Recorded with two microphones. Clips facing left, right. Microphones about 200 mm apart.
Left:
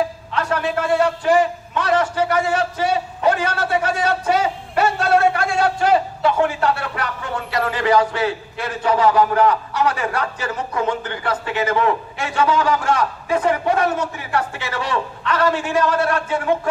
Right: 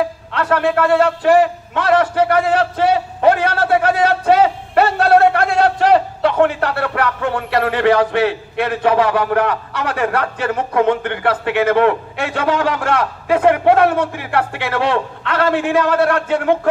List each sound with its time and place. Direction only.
0.3 s a man's voice: 60° right (ahead or behind)